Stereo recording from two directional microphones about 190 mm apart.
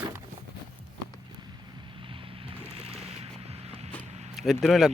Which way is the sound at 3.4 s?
30° right (ahead or behind).